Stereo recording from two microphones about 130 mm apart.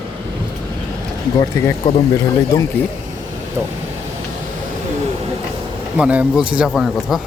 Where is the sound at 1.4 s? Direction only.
25° left (ahead or behind).